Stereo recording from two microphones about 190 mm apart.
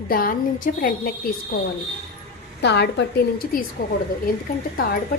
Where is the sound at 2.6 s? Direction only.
65° left (ahead or behind).